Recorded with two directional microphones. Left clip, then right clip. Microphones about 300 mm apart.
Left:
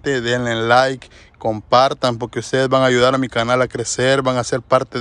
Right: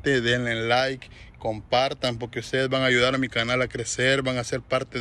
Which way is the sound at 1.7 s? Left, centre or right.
Left.